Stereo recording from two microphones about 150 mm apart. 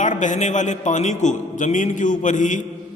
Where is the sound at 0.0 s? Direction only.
55° left (ahead or behind).